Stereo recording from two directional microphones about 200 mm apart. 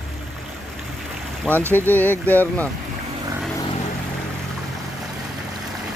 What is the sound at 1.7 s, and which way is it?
Speech, 10° left (ahead or behind).